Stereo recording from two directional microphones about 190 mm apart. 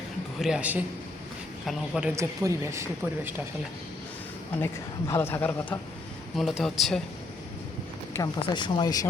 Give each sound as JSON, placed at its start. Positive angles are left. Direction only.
{"t": 0.3, "sound": "speech", "side_deg": -5}
{"t": 4.6, "sound": "speech", "side_deg": 15}
{"t": 8.1, "sound": "speech", "side_deg": 20}